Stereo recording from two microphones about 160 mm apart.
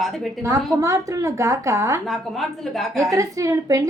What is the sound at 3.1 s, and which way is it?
Speech, 20° right (ahead or behind).